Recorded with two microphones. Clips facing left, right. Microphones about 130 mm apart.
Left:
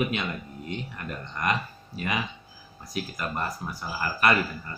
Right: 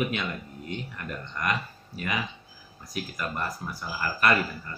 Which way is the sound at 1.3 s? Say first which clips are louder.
Left 2 dB; 25° left (ahead or behind).